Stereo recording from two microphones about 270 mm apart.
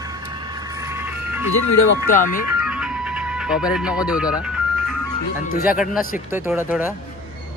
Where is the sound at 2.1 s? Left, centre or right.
Left.